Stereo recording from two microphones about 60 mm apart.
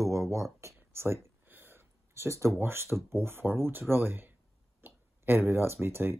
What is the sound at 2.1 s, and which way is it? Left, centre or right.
Speech, right.